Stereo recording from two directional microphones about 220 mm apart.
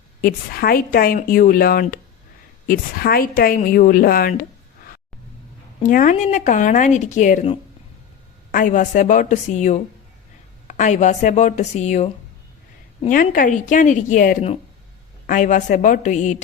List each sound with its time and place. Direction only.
0.2 s a woman's voice: 45° left (ahead or behind)
5.8 s a woman's voice: 35° left (ahead or behind)
13.1 s a woman's voice: 40° left (ahead or behind)